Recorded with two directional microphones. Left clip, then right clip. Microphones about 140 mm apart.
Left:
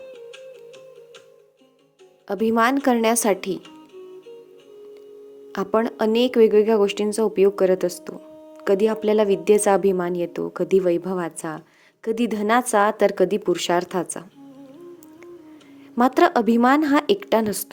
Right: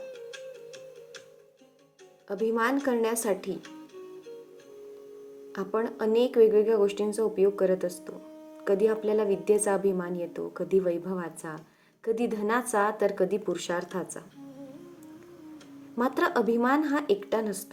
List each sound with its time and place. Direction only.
2.2 s speech: 75° left (ahead or behind)
5.5 s a woman's voice: 70° left (ahead or behind)
16.0 s speech: 65° left (ahead or behind)